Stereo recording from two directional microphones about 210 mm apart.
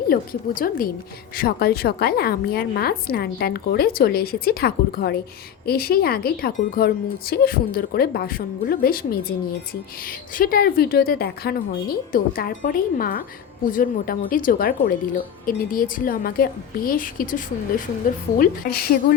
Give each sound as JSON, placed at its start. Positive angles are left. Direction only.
{"t": 0.1, "sound": "a woman's voice", "side_deg": 40}